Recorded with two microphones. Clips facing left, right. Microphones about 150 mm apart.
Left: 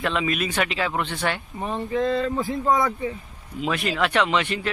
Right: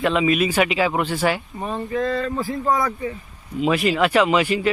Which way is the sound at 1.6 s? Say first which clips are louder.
Even; 20° left (ahead or behind).